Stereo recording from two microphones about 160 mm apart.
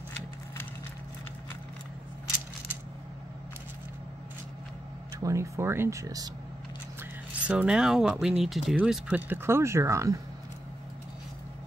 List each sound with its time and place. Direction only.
5.2 s speech: 20° right (ahead or behind)
7.0 s speech: 5° right (ahead or behind)